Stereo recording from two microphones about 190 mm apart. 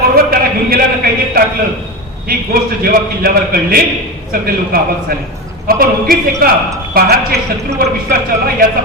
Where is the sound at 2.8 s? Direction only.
50° right (ahead or behind).